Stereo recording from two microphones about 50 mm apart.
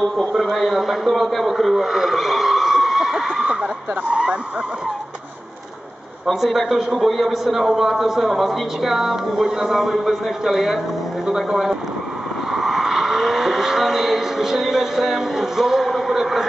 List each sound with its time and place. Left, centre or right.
0.0 s a man's voice: centre
3.4 s speech: centre
6.2 s a man's voice: centre
12.4 s vehicle: centre